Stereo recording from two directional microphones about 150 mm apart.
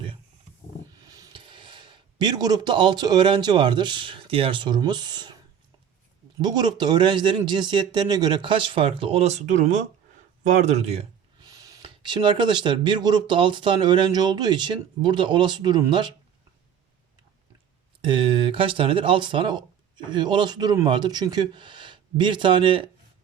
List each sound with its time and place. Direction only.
1.0 s a sound: 25° right (ahead or behind)
1.4 s speech: 35° right (ahead or behind)
6.4 s speech: 30° right (ahead or behind); by 11.0 s 45° right (ahead or behind)
11.5 s a sound: 25° right (ahead or behind)
11.8 s speech: 30° right (ahead or behind)
18.0 s speech: 35° right (ahead or behind)